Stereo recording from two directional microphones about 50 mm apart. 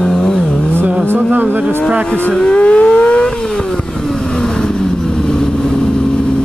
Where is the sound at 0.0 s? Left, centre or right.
Centre.